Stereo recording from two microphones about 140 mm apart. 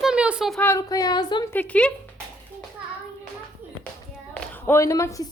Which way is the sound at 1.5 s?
10° left (ahead or behind).